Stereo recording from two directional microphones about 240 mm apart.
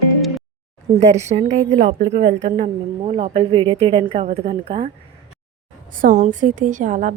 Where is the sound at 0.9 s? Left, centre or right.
Right.